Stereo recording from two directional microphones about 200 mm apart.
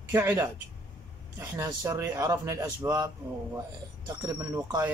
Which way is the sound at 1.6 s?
15° right (ahead or behind).